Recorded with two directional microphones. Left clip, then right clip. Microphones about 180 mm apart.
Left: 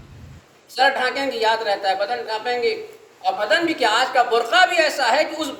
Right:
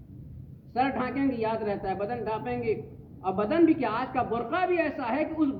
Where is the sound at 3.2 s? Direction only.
30° left (ahead or behind).